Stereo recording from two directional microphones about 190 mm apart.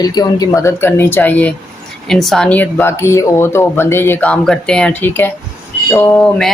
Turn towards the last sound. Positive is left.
turn(degrees=5)  # may be behind; listen again after turning